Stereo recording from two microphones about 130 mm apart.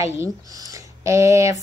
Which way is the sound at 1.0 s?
25° right (ahead or behind).